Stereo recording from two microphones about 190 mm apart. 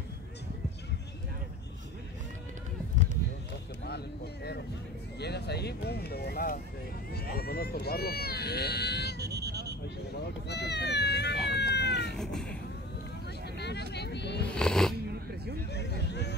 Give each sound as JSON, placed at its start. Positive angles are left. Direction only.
{"t": 5.2, "sound": "speech", "side_deg": 60}
{"t": 9.2, "sound": "a sound", "side_deg": -60}
{"t": 10.5, "sound": "speech", "side_deg": 60}
{"t": 11.5, "sound": "cat", "side_deg": 65}
{"t": 12.2, "sound": "cat", "side_deg": 5}
{"t": 13.6, "sound": "vehicle", "side_deg": 60}
{"t": 14.5, "sound": "cat", "side_deg": 5}
{"t": 15.7, "sound": "a sound", "side_deg": 60}